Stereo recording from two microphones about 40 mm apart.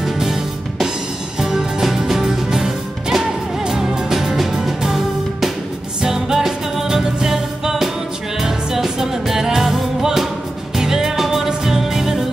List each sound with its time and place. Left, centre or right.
0.0 s music: centre